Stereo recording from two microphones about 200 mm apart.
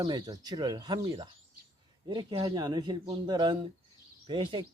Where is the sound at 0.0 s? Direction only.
20° right (ahead or behind).